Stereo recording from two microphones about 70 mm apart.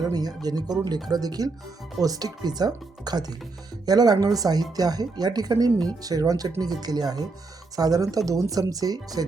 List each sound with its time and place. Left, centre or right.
0.0 s speech: right